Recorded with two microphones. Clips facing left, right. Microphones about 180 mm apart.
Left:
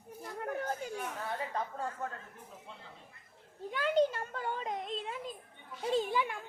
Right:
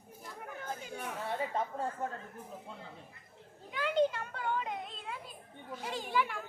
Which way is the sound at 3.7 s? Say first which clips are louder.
Left 1 dB; 40° left (ahead or behind).